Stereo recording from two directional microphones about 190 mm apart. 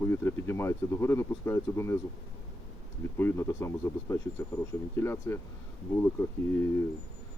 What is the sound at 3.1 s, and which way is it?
Speech, 15° left (ahead or behind).